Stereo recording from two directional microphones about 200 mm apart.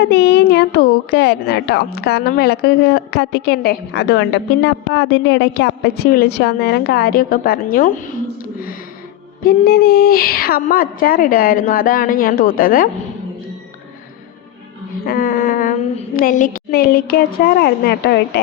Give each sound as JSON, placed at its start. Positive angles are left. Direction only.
{"t": 0.0, "sound": "a woman's voice", "side_deg": 55}
{"t": 9.4, "sound": "a woman's voice", "side_deg": 50}
{"t": 15.0, "sound": "a woman's voice", "side_deg": 45}